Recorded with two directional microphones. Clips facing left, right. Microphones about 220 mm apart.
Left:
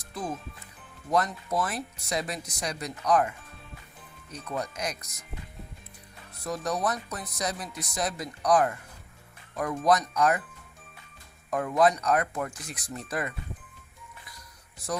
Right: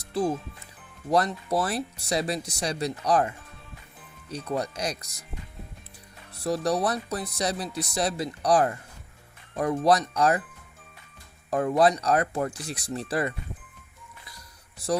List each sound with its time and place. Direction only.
0.1 s speech: 30° right (ahead or behind)
6.4 s speech: 35° right (ahead or behind)
11.5 s speech: 35° right (ahead or behind)